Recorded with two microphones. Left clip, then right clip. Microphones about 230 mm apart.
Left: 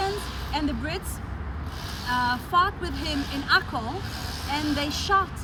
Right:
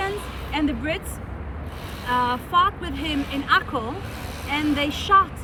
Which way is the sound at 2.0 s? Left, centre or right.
Left.